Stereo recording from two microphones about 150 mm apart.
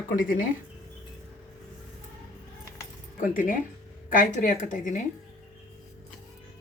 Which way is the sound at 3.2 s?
65° left (ahead or behind).